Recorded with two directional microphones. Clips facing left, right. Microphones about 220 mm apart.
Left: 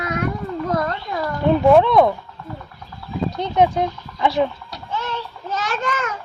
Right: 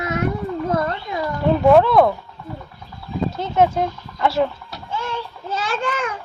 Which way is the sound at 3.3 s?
5° right (ahead or behind).